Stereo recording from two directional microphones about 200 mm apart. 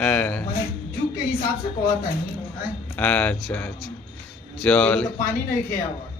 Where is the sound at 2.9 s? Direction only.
5° left (ahead or behind).